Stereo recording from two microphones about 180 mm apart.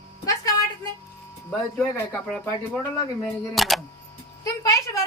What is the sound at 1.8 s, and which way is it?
Speech, 10° left (ahead or behind).